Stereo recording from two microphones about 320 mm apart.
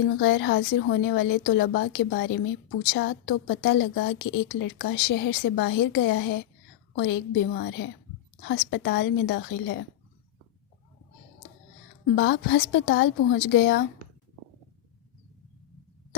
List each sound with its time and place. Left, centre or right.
0.2 s a woman's voice: left
12.1 s a woman's voice: left